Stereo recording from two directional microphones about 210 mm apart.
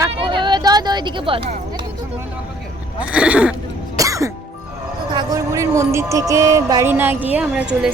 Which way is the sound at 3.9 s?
15° right (ahead or behind).